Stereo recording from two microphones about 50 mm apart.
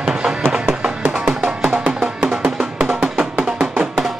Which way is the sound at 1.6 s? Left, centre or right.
Right.